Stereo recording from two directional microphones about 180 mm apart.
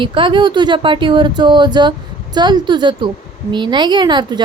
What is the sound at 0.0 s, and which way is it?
Speech, 30° right (ahead or behind).